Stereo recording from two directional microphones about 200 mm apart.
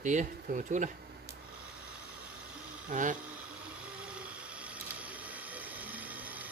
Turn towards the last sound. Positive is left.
turn(degrees=-10)  # may be behind; listen again after turning